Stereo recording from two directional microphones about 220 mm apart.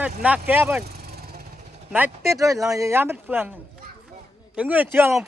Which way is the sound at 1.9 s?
10° right (ahead or behind).